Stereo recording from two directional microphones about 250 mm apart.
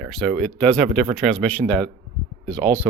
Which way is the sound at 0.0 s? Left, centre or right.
Centre.